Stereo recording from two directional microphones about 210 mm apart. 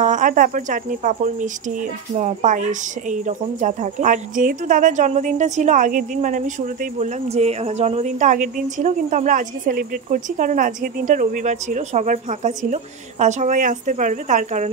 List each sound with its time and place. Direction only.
0.0 s speech: 35° right (ahead or behind)